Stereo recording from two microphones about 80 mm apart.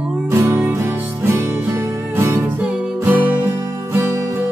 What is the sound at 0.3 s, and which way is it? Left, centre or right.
Music, right.